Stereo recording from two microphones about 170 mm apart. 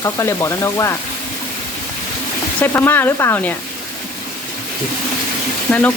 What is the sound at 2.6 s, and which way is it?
Speech, 10° left (ahead or behind).